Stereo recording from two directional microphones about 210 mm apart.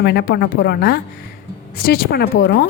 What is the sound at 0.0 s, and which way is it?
Speech, 50° left (ahead or behind).